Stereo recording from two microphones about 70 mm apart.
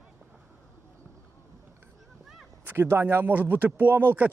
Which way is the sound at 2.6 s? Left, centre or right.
Right.